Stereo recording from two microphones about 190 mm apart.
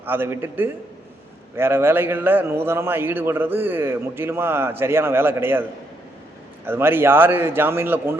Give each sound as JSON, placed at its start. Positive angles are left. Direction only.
{"t": 0.0, "sound": "a man's voice", "side_deg": -10}
{"t": 6.7, "sound": "a man's voice", "side_deg": -10}